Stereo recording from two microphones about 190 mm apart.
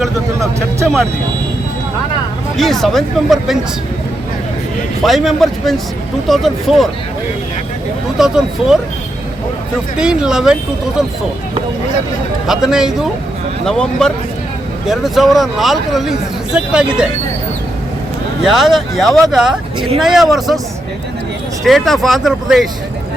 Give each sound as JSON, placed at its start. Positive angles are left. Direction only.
{"t": 2.6, "sound": "speech", "side_deg": 0}
{"t": 5.0, "sound": "speech", "side_deg": 0}
{"t": 8.2, "sound": "speech", "side_deg": -5}
{"t": 10.0, "sound": "speech", "side_deg": -5}
{"t": 12.5, "sound": "speech", "side_deg": -5}
{"t": 18.4, "sound": "speech", "side_deg": 0}
{"t": 21.6, "sound": "speech", "side_deg": 0}